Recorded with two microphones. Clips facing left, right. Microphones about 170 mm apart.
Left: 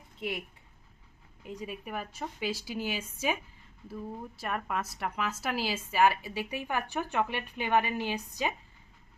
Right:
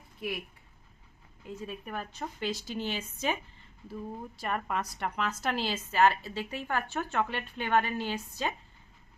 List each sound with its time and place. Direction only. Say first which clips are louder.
0.2 s speech: even; 25° left (ahead or behind)
1.5 s a woman's voice: even; 15° left (ahead or behind)
4.4 s a woman's voice: right 1 dB; centre (ahead or behind)